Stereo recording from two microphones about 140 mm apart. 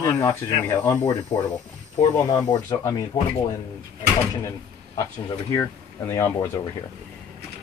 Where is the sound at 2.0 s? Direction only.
30° left (ahead or behind).